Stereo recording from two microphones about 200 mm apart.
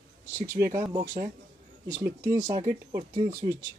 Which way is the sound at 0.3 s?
10° right (ahead or behind).